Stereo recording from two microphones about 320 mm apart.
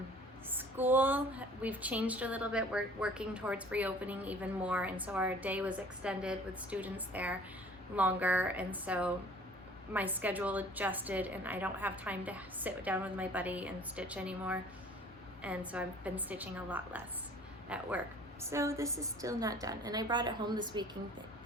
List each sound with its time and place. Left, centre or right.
0.5 s a woman's voice: centre